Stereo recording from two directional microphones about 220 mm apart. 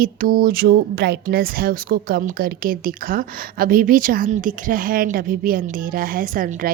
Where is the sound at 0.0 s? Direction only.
40° right (ahead or behind).